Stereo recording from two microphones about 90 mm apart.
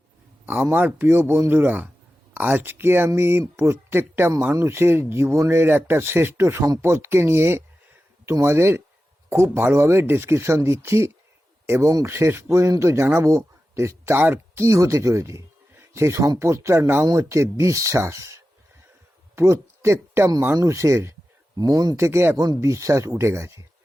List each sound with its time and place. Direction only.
0.4 s speech: 20° right (ahead or behind)
21.6 s speech: 45° right (ahead or behind)
21.9 s speech: 30° right (ahead or behind)